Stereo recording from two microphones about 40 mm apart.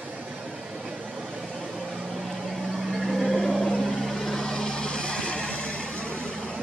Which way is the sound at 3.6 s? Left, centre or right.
Centre.